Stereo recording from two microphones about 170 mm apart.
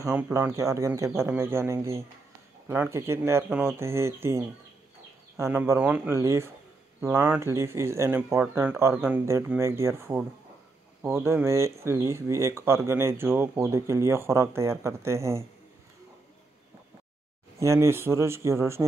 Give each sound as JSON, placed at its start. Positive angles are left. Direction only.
{"t": 0.0, "sound": "speech", "side_deg": -15}
{"t": 5.4, "sound": "speech", "side_deg": -15}
{"t": 17.6, "sound": "speech", "side_deg": -15}